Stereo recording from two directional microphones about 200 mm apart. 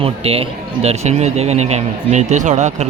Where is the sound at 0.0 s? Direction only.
30° right (ahead or behind).